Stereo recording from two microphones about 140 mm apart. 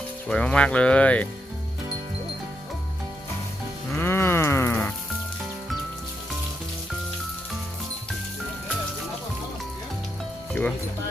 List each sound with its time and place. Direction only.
0.3 s speech: 10° left (ahead or behind)
3.9 s music: 15° left (ahead or behind)
10.5 s music: 5° left (ahead or behind)